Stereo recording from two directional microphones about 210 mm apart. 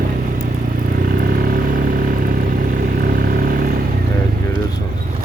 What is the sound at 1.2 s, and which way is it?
Vehicle, 40° right (ahead or behind).